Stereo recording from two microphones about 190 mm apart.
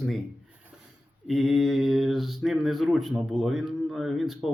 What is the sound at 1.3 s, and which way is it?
Speech, centre (ahead or behind).